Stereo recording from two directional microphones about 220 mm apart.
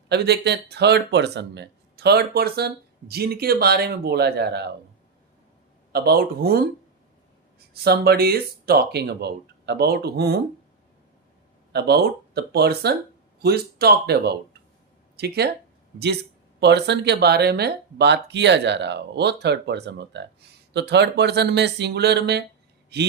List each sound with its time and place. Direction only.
0.1 s speech: 50° right (ahead or behind)
5.9 s speech: 45° right (ahead or behind)
7.7 s speech: 45° right (ahead or behind)
11.7 s speech: 50° right (ahead or behind)